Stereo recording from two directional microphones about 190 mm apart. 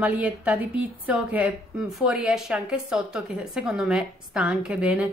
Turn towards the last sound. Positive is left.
turn(degrees=-5)  # may be behind; listen again after turning